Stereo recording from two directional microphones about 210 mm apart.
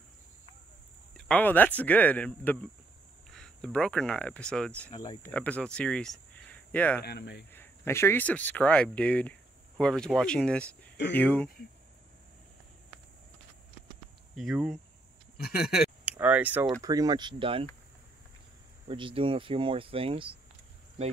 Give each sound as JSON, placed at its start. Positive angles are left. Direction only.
{"t": 1.1, "sound": "speech", "side_deg": 5}
{"t": 7.0, "sound": "speech", "side_deg": 50}
{"t": 7.5, "sound": "speech", "side_deg": 10}
{"t": 14.3, "sound": "speech", "side_deg": 0}
{"t": 15.3, "sound": "speech", "side_deg": 45}
{"t": 16.1, "sound": "a sound", "side_deg": -5}
{"t": 16.8, "sound": "speech", "side_deg": -15}
{"t": 18.9, "sound": "speech", "side_deg": -25}